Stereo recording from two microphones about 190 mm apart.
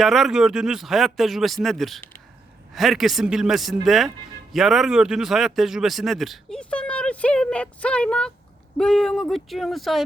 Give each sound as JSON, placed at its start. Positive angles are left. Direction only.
{"t": 0.0, "sound": "a man's voice", "side_deg": 0}